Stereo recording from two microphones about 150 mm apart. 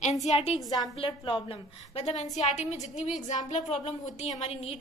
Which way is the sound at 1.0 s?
35° left (ahead or behind).